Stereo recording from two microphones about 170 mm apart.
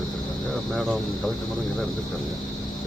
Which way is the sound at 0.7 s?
Centre (ahead or behind).